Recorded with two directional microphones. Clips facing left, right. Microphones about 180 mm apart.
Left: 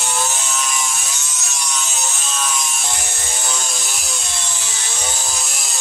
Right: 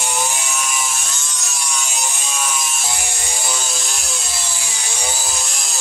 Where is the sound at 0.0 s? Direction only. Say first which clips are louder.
Even; 15° right (ahead or behind).